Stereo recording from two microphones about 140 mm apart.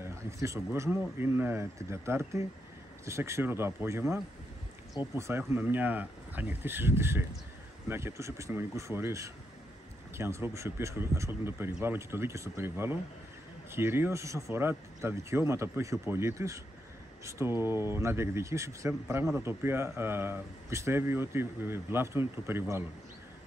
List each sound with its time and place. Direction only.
0.0 s a man's voice: 20° right (ahead or behind)